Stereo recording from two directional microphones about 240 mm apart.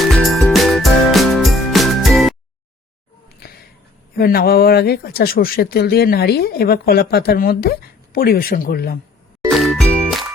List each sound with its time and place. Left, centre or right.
0.0 s music: centre
4.2 s speech: left
9.5 s jingle: centre